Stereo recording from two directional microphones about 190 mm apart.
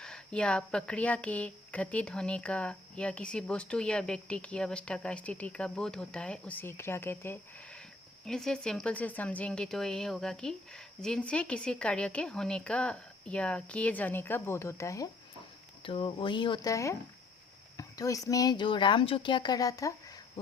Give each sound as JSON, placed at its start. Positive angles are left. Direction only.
{"t": 0.0, "sound": "speech", "side_deg": 5}
{"t": 15.8, "sound": "speech", "side_deg": 30}